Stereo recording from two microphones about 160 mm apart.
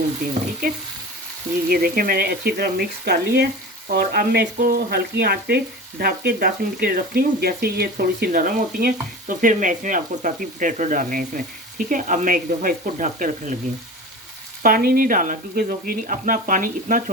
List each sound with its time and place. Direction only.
1.7 s speech: 70° right (ahead or behind)
14.6 s speech: 65° right (ahead or behind)